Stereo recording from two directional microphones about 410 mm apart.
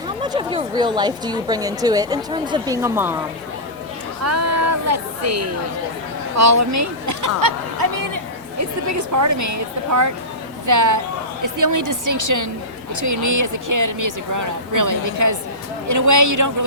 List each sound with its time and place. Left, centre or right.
0.2 s a woman's voice: centre
4.2 s speech: right